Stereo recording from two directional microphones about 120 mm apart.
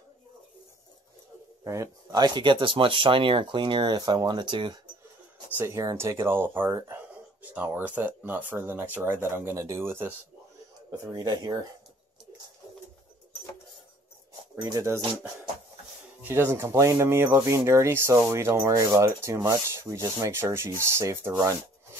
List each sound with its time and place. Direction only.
1.6 s speech: 25° right (ahead or behind); by 4.7 s 40° right (ahead or behind)
5.6 s speech: 25° right (ahead or behind)
11.1 s speech: 35° right (ahead or behind)
14.6 s speech: 25° right (ahead or behind)
16.2 s speech: 20° right (ahead or behind)